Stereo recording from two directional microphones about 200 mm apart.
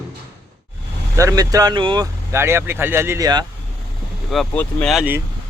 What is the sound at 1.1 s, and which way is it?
Speech, 15° right (ahead or behind).